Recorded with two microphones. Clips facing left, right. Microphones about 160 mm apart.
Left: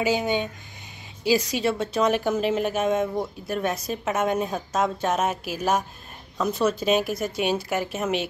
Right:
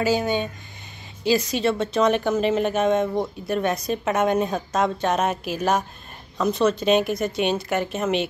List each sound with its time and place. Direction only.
0.0 s a woman's voice: 15° left (ahead or behind)